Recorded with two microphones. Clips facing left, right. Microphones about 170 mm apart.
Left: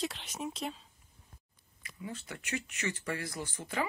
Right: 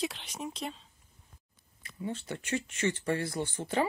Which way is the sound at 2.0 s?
30° right (ahead or behind).